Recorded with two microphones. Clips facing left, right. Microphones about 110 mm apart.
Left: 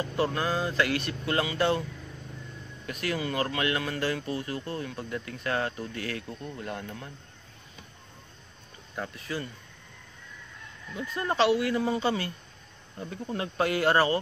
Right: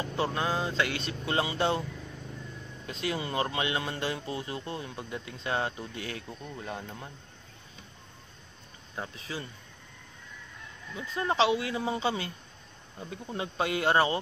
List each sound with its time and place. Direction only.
0.0 s speech: 25° right (ahead or behind)
2.9 s speech: 25° right (ahead or behind)
6.2 s speech: 10° right (ahead or behind)
8.9 s speech: 15° right (ahead or behind)
11.0 s speech: 15° right (ahead or behind)